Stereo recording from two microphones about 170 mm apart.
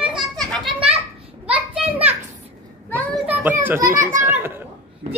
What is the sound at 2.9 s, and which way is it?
Children playing, 10° left (ahead or behind).